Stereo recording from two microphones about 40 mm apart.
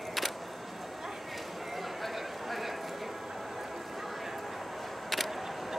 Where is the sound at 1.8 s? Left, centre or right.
Centre.